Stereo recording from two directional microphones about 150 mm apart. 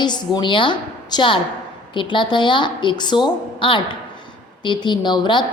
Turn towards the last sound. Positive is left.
turn(degrees=30)  # may be behind; listen again after turning